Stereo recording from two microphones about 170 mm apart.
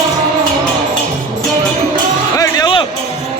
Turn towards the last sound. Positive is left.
turn(degrees=25)  # may be behind; listen again after turning